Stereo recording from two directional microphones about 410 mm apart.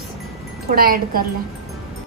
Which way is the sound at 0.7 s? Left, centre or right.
Right.